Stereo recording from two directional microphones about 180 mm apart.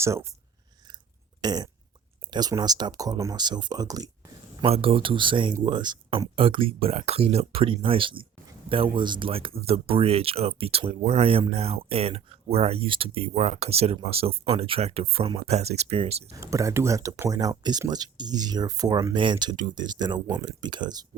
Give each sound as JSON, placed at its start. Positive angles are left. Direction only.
{"t": 0.0, "sound": "speech", "side_deg": -15}
{"t": 1.4, "sound": "burping", "side_deg": -20}
{"t": 2.3, "sound": "speech", "side_deg": -25}
{"t": 4.6, "sound": "speech", "side_deg": -30}
{"t": 16.3, "sound": "speech", "side_deg": -20}